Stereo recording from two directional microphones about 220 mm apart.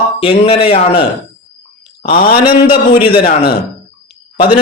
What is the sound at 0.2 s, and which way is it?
Speech, 25° left (ahead or behind).